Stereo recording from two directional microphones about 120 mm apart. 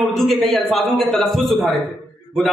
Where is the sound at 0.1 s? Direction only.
Centre (ahead or behind).